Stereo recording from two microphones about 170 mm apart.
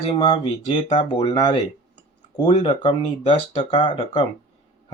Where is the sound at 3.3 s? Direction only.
30° left (ahead or behind).